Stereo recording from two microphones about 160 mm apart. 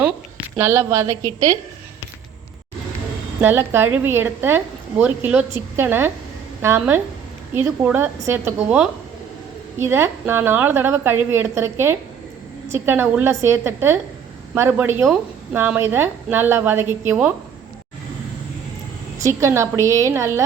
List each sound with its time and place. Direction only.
0.0 s a sound: 10° right (ahead or behind)
3.4 s a woman's voice: 15° right (ahead or behind)
19.2 s a woman's voice: 20° right (ahead or behind)